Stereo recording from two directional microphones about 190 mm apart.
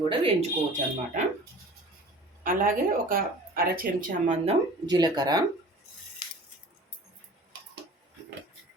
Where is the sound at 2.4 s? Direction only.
45° right (ahead or behind).